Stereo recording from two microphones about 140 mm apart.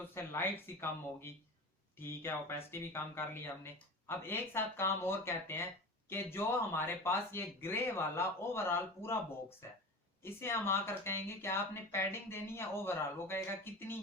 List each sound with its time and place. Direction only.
0.0 s speech: 15° left (ahead or behind)